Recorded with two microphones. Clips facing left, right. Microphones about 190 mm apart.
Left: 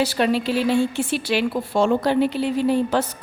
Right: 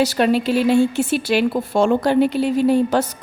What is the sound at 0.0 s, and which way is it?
A woman's voice, 45° right (ahead or behind).